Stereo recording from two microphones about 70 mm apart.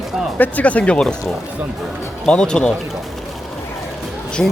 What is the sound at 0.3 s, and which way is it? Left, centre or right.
Speech, left.